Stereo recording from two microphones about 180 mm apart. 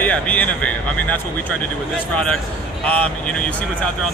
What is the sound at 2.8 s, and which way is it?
Speech, 5° left (ahead or behind).